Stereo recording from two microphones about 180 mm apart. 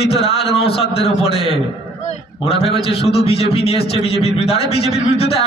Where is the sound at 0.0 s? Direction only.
35° left (ahead or behind).